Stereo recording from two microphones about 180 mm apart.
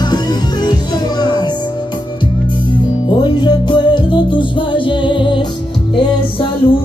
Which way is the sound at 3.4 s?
25° left (ahead or behind).